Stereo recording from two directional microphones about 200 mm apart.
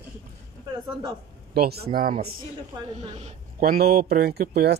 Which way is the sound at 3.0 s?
35° right (ahead or behind).